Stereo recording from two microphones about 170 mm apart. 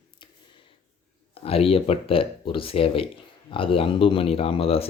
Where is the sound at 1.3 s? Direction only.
35° left (ahead or behind).